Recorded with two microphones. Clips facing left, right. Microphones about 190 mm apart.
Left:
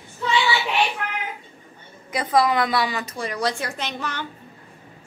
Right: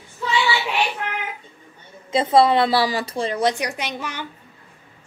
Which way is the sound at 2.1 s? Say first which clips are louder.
Right 4 dB; 25° right (ahead or behind).